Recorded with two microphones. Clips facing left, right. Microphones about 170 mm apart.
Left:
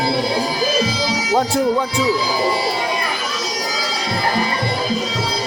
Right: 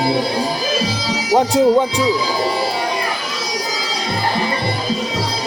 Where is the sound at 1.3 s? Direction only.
20° right (ahead or behind).